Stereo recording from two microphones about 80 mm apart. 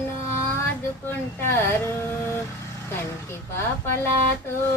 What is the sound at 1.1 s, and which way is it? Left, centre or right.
Speech, left.